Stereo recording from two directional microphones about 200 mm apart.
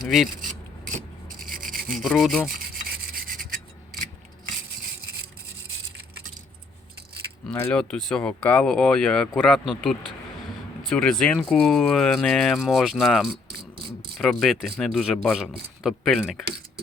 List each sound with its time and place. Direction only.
1.5 s a sound: 45° right (ahead or behind)
1.9 s speech: centre (ahead or behind)
2.6 s rub: 45° right (ahead or behind)
7.5 s speech: 5° left (ahead or behind)